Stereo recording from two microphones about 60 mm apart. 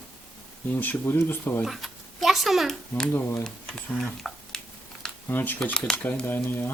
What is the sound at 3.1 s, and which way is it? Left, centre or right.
Speech, left.